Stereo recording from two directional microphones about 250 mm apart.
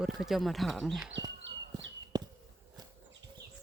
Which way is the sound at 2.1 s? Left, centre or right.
Centre.